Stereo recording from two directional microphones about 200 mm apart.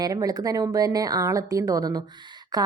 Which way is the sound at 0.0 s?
20° right (ahead or behind).